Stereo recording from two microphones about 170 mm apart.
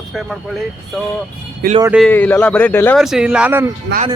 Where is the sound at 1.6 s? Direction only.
65° right (ahead or behind).